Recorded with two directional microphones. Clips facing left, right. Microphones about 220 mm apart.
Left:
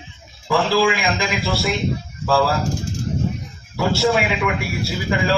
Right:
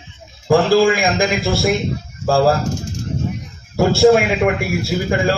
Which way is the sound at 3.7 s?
45° right (ahead or behind).